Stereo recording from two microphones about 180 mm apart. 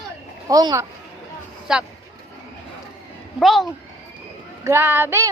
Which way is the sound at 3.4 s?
Centre (ahead or behind).